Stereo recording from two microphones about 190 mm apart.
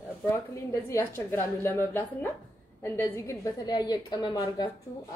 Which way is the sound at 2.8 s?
15° left (ahead or behind).